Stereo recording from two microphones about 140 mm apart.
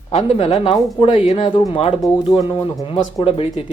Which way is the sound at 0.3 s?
45° left (ahead or behind).